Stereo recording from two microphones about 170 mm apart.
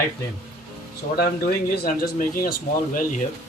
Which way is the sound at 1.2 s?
60° left (ahead or behind).